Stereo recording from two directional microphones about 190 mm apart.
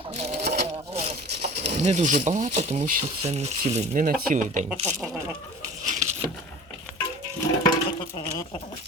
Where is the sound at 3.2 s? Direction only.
35° right (ahead or behind).